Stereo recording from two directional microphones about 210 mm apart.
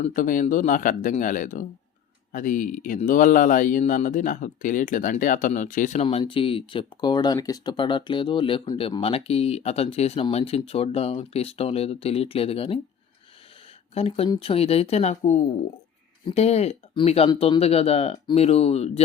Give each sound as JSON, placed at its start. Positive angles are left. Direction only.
{"t": 0.0, "sound": "speech", "side_deg": 40}
{"t": 13.9, "sound": "speech", "side_deg": 30}